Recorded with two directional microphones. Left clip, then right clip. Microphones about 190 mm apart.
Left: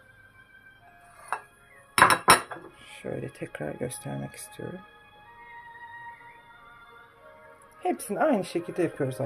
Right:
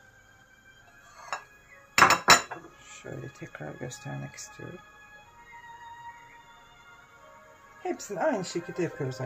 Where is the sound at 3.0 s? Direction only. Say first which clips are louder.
Left 7 dB; 45° left (ahead or behind).